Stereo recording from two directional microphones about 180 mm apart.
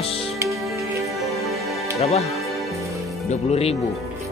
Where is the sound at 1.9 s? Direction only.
35° left (ahead or behind).